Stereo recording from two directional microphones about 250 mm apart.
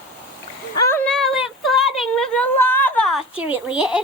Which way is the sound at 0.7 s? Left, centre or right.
Centre.